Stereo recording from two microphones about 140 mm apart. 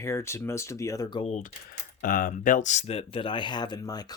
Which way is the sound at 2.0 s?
85° left.